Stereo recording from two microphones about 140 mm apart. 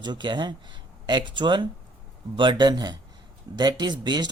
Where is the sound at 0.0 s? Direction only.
35° right (ahead or behind).